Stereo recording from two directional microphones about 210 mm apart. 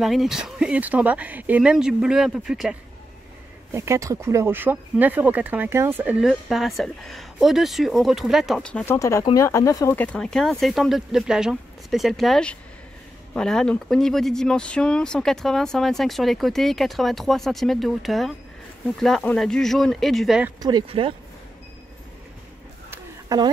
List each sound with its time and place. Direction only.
0.0 s speech: centre (ahead or behind)
3.7 s speech: 15° right (ahead or behind)
20.6 s speech: 20° right (ahead or behind)
22.8 s a sound: 20° right (ahead or behind)